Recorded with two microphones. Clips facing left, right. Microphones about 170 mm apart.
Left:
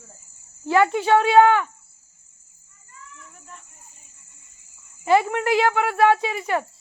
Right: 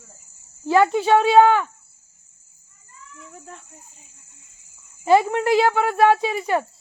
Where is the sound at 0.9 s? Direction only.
15° right (ahead or behind).